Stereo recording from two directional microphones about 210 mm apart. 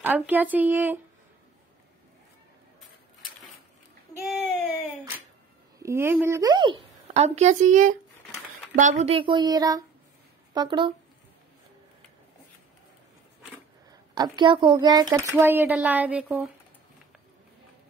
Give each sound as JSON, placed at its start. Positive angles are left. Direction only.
{"t": 0.0, "sound": "speech", "side_deg": -10}
{"t": 4.1, "sound": "baby cry", "side_deg": 0}
{"t": 5.8, "sound": "a woman's voice", "side_deg": -10}
{"t": 14.1, "sound": "speech", "side_deg": -20}